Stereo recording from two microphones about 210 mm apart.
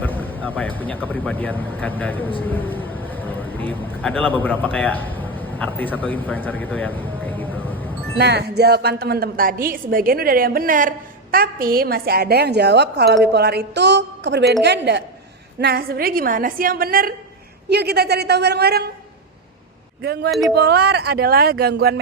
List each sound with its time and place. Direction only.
0.0 s speech: 10° left (ahead or behind)
8.2 s a woman's voice: 50° right (ahead or behind)
20.0 s a woman's voice: 50° right (ahead or behind)